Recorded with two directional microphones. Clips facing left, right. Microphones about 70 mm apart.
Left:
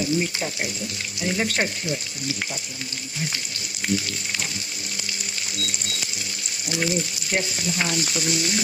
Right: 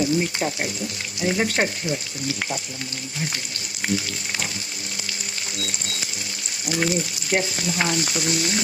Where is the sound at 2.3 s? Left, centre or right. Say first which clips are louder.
Right 3 dB; right.